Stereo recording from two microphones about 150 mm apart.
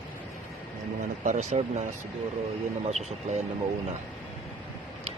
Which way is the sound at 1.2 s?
55° right (ahead or behind).